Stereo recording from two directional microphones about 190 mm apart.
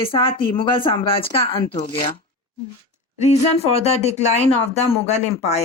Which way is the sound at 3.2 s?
35° left (ahead or behind).